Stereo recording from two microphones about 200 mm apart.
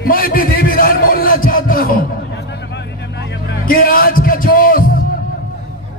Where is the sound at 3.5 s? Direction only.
45° left (ahead or behind).